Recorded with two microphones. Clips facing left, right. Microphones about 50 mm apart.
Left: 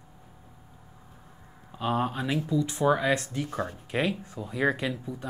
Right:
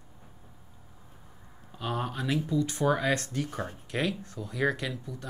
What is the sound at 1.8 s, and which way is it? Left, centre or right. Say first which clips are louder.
Speech: left 5 dB; left.